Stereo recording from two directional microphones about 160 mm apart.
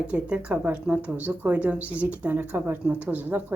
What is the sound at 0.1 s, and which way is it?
A woman's voice, 5° right (ahead or behind).